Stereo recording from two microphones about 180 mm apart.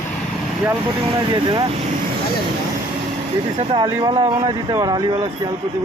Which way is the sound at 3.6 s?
25° right (ahead or behind).